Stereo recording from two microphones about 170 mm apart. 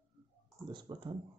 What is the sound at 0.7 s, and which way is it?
Speech, 25° right (ahead or behind).